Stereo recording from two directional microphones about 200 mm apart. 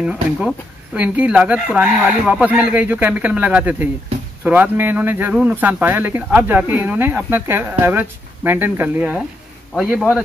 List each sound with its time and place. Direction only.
0.0 s speech: 5° right (ahead or behind)